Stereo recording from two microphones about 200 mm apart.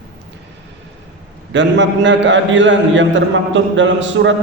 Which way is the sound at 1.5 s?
65° right (ahead or behind).